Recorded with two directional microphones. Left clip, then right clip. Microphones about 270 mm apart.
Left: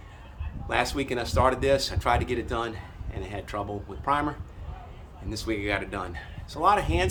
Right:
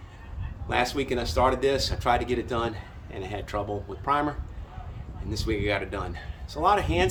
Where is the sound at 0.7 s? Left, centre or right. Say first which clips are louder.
Right 1 dB; centre.